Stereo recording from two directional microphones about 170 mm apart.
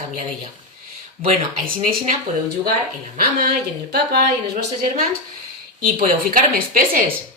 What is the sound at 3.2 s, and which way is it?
Speech, 65° right (ahead or behind).